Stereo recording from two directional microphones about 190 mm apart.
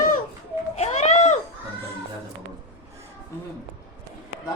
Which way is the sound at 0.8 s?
35° left (ahead or behind).